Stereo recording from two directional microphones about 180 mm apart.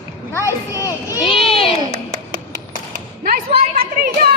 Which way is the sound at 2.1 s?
50° right (ahead or behind).